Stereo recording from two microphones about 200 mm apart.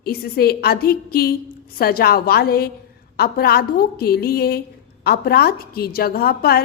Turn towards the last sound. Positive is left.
turn(degrees=50)  # may be behind; listen again after turning